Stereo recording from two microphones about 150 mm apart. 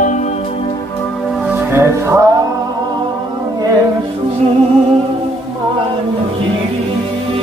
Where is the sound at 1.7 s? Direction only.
20° right (ahead or behind).